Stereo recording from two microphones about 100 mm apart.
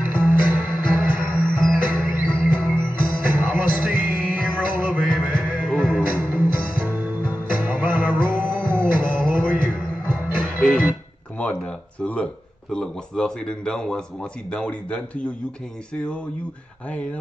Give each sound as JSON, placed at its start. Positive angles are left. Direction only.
{"t": 0.1, "sound": "music", "side_deg": -20}
{"t": 5.6, "sound": "music", "side_deg": 5}
{"t": 6.0, "sound": "music", "side_deg": -15}
{"t": 11.3, "sound": "a sound", "side_deg": 10}
{"t": 12.7, "sound": "speech", "side_deg": 5}